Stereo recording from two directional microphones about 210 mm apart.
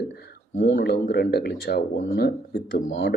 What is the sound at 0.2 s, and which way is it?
Speech, 50° left (ahead or behind).